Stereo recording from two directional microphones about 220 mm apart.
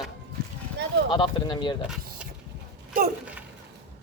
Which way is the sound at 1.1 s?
20° left (ahead or behind).